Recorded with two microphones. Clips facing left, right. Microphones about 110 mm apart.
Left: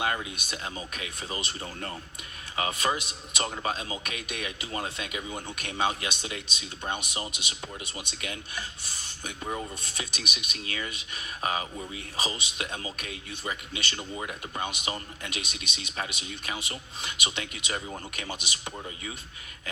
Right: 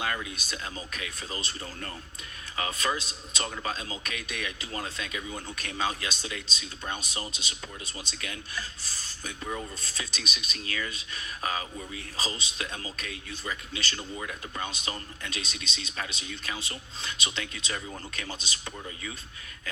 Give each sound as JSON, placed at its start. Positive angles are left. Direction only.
{"t": 0.0, "sound": "a man's voice", "side_deg": 20}